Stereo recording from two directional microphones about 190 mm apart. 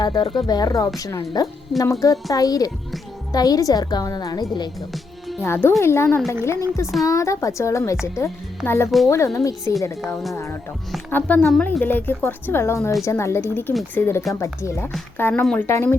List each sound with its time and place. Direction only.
0.0 s a woman's voice: 20° left (ahead or behind)